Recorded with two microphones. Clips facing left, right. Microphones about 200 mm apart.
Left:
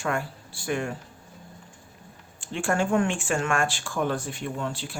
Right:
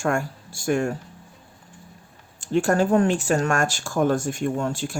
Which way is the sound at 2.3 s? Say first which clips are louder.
Right 6 dB; 40° right (ahead or behind).